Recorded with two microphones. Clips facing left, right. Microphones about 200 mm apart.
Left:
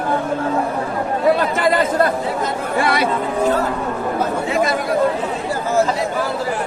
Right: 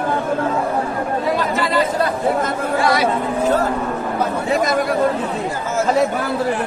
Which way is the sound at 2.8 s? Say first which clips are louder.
Right 1 dB; 60° left (ahead or behind).